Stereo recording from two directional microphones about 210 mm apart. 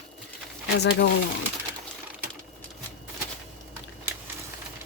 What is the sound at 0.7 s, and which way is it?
Speech, 55° left (ahead or behind).